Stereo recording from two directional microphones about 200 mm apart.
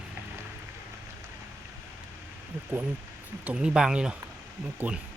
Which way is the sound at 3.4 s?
5° right (ahead or behind).